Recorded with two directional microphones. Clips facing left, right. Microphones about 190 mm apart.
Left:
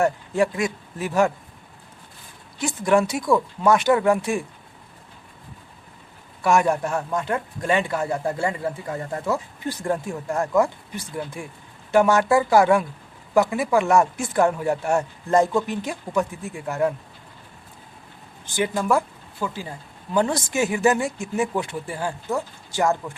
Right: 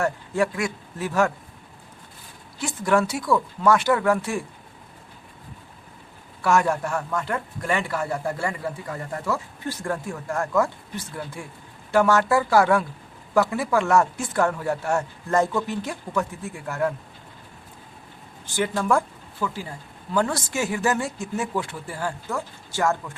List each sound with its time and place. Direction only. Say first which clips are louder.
0.0 s speech: left 3 dB; 20° left (ahead or behind)
2.6 s speech: left 2 dB; 20° left (ahead or behind)
6.4 s a man's voice: left 2 dB; 15° left (ahead or behind)
18.5 s speech: left 1 dB; 15° left (ahead or behind)